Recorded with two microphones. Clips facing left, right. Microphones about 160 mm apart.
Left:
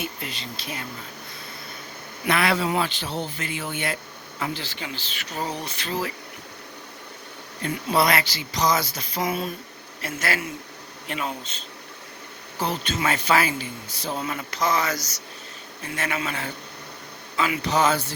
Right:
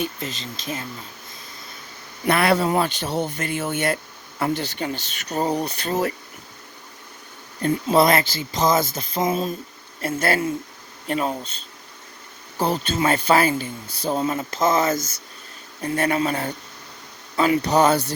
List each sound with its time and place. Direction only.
0.3 s speech: 40° right (ahead or behind)
2.2 s speech: 45° right (ahead or behind)
7.6 s speech: 40° right (ahead or behind)
9.1 s a sound: 30° right (ahead or behind)
10.0 s speech: 30° right (ahead or behind)
12.5 s speech: 35° right (ahead or behind)
14.7 s a sound: 25° right (ahead or behind)
15.8 s speech: 35° right (ahead or behind)